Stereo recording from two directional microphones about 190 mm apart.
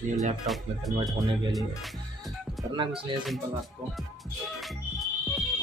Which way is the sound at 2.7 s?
25° right (ahead or behind).